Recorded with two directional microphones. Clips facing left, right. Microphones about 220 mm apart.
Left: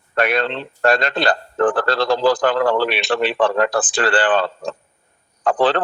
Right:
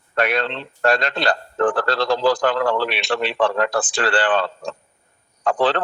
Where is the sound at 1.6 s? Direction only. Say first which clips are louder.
Left 2 dB; 50° left (ahead or behind).